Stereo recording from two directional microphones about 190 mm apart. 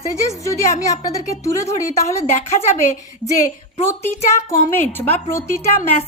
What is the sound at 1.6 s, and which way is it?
A woman's voice, 35° left (ahead or behind).